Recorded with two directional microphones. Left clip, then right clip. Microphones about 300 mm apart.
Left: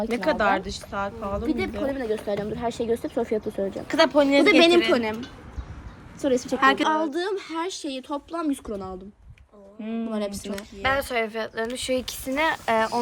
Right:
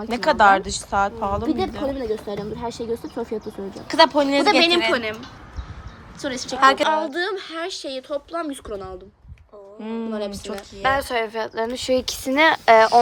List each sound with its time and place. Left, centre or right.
0.1 s a woman's voice: centre
3.8 s speech: centre
6.2 s a woman's voice: centre
6.6 s speech: centre
6.8 s speech: centre
9.8 s speech: centre
10.1 s speech: left
10.8 s speech: right